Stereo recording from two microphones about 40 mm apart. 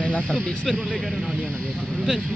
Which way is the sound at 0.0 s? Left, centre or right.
Left.